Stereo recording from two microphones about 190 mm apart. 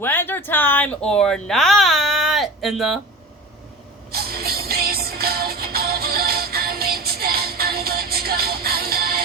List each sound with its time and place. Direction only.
0.0 s speech: 10° left (ahead or behind)
4.1 s music: 55° right (ahead or behind)